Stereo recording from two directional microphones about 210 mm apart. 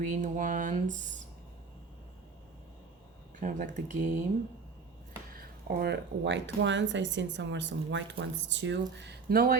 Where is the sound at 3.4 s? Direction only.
40° right (ahead or behind).